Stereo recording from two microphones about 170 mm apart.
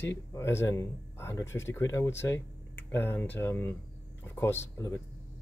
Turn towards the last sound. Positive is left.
turn(degrees=15)  # may be behind; listen again after turning